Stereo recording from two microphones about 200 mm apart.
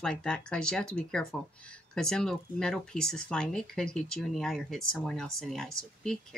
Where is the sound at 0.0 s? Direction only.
5° left (ahead or behind).